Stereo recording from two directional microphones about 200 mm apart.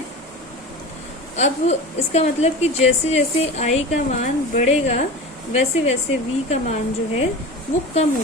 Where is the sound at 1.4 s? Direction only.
35° left (ahead or behind).